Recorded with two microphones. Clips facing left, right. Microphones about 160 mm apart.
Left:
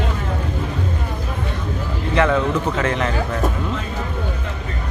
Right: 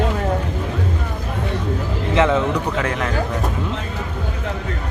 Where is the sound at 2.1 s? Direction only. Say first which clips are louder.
Right 1 dB; 20° right (ahead or behind).